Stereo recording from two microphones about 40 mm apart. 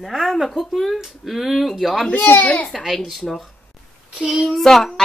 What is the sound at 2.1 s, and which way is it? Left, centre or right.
Speech, left.